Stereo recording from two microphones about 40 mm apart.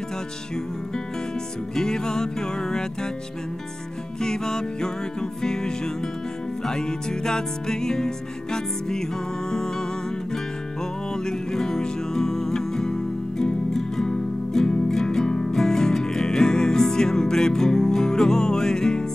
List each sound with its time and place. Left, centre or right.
1.8 s music: centre
4.2 s music: centre